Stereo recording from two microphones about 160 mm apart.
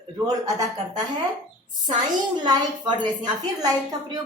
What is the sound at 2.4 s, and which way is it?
A woman's voice, 25° right (ahead or behind).